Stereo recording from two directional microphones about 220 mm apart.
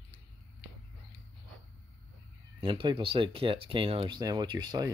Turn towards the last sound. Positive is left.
turn(degrees=-20)  # may be behind; listen again after turning